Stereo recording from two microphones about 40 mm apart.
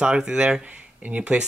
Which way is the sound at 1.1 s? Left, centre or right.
Right.